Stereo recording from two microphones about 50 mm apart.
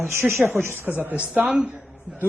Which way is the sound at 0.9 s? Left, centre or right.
Right.